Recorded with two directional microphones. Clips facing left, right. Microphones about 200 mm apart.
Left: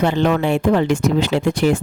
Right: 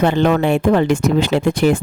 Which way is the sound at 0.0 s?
55° right (ahead or behind).